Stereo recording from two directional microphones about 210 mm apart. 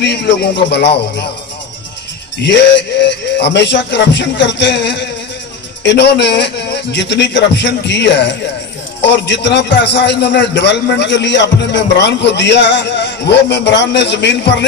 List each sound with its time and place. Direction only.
0.0 s speech: 55° left (ahead or behind)
2.4 s a man's voice: 55° left (ahead or behind)